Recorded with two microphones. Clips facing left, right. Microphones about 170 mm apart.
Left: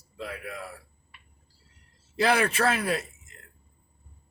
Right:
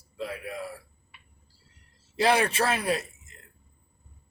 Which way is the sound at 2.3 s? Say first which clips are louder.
Even; 25° right (ahead or behind).